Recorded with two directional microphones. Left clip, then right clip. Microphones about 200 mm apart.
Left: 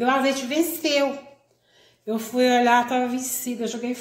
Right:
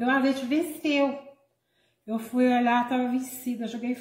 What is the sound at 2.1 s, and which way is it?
A woman's voice, 30° left (ahead or behind).